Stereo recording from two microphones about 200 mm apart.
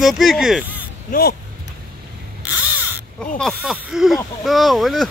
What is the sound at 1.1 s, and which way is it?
Speech, 40° left (ahead or behind).